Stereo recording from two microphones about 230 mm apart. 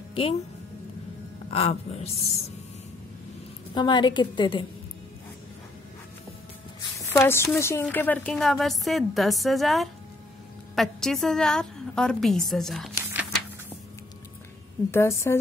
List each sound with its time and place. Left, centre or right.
0.1 s speech: left
1.5 s a woman's voice: left
3.7 s a woman's voice: centre
7.0 s a woman's voice: centre
14.9 s a woman's voice: centre